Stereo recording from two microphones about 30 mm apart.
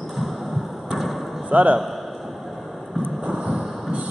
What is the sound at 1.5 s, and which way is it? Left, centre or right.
Speech, right.